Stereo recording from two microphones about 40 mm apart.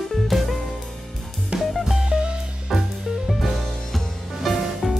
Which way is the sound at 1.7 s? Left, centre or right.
Centre.